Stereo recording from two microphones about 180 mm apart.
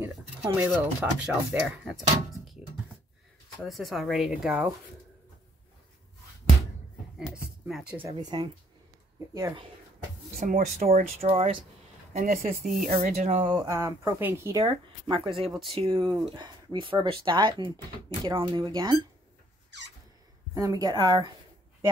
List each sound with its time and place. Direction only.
0.0 s speech: 10° right (ahead or behind)
7.2 s a sound: 5° right (ahead or behind)
8.0 s speech: 25° right (ahead or behind)
10.4 s speech: 40° right (ahead or behind)
12.1 s speech: 45° right (ahead or behind)
12.9 s speech: 40° right (ahead or behind)
13.5 s speech: 20° right (ahead or behind)
20.5 s speech: 20° right (ahead or behind)